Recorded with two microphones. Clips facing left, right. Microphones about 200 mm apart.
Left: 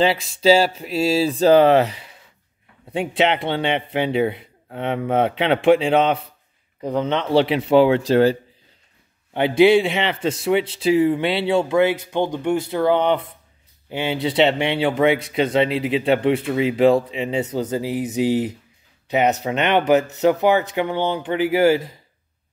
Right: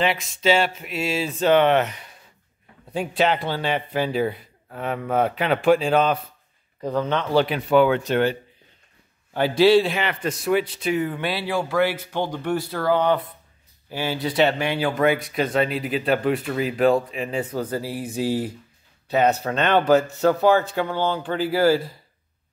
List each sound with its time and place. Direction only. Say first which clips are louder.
0.0 s speech: left 5 dB; 30° left (ahead or behind)
3.0 s a man's voice: left 2 dB; 25° left (ahead or behind)
9.3 s a man's voice: left 2 dB; 20° left (ahead or behind)